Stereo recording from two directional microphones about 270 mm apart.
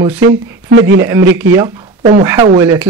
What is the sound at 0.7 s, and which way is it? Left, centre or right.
Speech, right.